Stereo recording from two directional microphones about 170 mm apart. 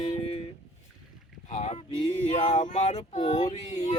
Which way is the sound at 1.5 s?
40° left (ahead or behind).